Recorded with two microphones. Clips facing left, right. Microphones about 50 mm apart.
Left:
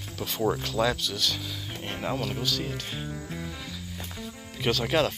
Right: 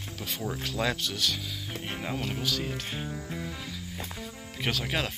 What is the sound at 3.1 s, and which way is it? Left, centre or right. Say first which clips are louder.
Music: even; centre.